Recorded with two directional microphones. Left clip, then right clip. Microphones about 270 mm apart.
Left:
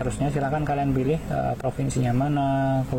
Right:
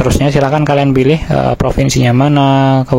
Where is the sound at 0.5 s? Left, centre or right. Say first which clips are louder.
Right 14 dB; right.